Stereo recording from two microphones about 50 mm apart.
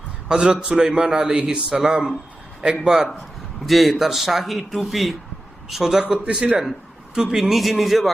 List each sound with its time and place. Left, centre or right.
0.3 s a man's voice: centre
6.0 s speech: centre
6.6 s a man's voice: centre
7.5 s speech: centre